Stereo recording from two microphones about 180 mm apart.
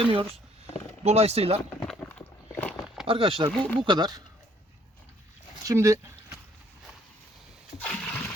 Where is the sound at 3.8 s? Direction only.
25° right (ahead or behind).